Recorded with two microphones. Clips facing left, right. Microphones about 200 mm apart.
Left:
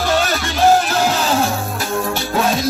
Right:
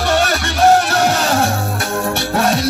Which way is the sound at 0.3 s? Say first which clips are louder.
Right 1 dB; 70° right (ahead or behind).